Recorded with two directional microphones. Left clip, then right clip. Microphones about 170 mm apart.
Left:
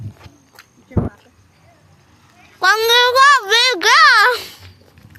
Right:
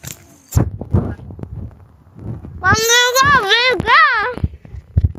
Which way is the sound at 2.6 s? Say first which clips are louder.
Left 1 dB; 15° left (ahead or behind).